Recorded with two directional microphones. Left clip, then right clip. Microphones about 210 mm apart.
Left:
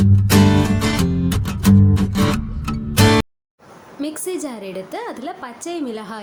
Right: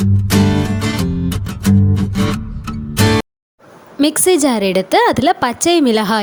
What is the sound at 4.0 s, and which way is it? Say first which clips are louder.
A woman's voice: right 13 dB; 45° right (ahead or behind).